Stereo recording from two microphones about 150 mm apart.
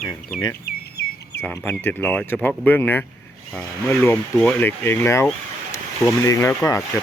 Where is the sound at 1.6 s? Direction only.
15° left (ahead or behind).